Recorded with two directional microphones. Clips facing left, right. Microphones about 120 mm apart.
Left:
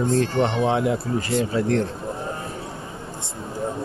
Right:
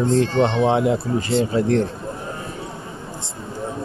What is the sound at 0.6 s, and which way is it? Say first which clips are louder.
Speech: right 3 dB; 20° right (ahead or behind).